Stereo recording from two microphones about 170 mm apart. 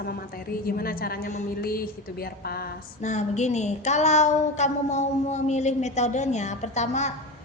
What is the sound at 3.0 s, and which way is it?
A woman's voice, 45° left (ahead or behind).